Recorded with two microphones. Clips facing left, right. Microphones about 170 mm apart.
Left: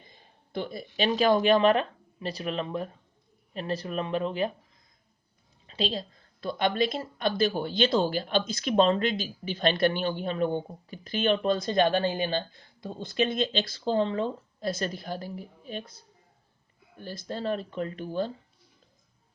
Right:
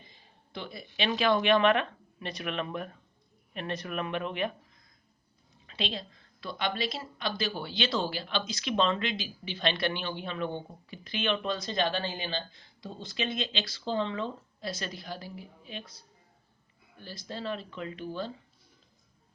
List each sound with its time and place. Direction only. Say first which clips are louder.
0.1 s speech: left 8 dB; 45° left (ahead or behind); by 4.5 s 30° left (ahead or behind)
5.6 s a woman's voice: left 5 dB; 35° left (ahead or behind)